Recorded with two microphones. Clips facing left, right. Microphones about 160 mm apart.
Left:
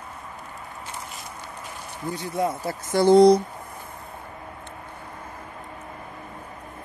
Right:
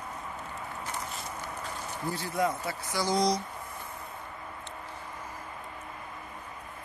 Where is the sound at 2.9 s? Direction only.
60° left (ahead or behind).